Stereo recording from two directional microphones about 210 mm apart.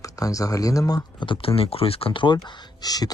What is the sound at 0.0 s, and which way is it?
Speech, 15° left (ahead or behind).